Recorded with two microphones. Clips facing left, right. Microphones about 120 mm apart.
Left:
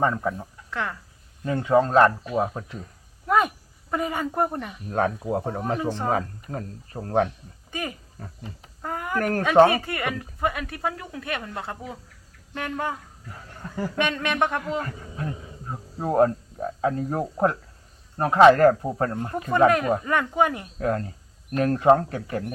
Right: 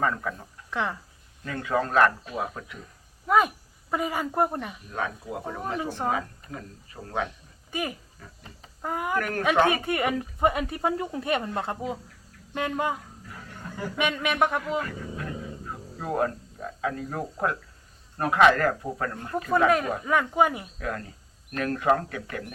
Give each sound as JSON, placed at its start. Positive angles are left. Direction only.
{"t": 0.0, "sound": "speech", "side_deg": 25}
{"t": 0.7, "sound": "speech", "side_deg": -15}
{"t": 1.5, "sound": "speech", "side_deg": 25}
{"t": 3.2, "sound": "speech", "side_deg": 0}
{"t": 4.9, "sound": "speech", "side_deg": 45}
{"t": 7.7, "sound": "speech", "side_deg": -10}
{"t": 8.2, "sound": "speech", "side_deg": 50}
{"t": 8.8, "sound": "a sound", "side_deg": -10}
{"t": 9.1, "sound": "speech", "side_deg": 35}
{"t": 9.8, "sound": "speech", "side_deg": -20}
{"t": 14.8, "sound": "wild animals", "side_deg": 35}
{"t": 16.0, "sound": "speech", "side_deg": 30}
{"t": 20.1, "sound": "speech", "side_deg": -5}
{"t": 20.7, "sound": "speech", "side_deg": 35}